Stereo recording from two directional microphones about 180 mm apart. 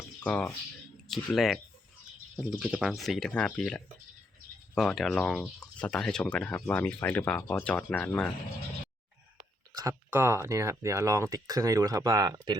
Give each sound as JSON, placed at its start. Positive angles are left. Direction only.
{"t": 0.2, "sound": "speech", "side_deg": 5}
{"t": 9.7, "sound": "speech", "side_deg": -15}